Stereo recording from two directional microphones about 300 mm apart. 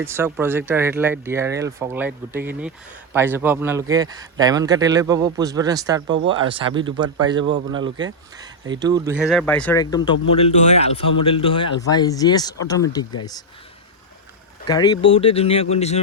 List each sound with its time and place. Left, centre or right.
0.0 s speech: centre
14.7 s speech: centre